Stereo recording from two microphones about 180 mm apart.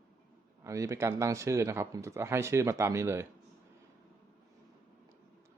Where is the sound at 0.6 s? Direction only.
15° right (ahead or behind).